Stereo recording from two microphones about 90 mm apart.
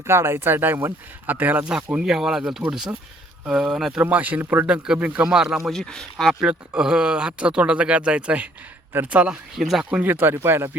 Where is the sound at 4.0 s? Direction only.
20° right (ahead or behind).